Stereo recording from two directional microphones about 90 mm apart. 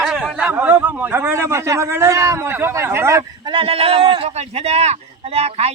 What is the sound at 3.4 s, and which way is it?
Speech, 70° right (ahead or behind).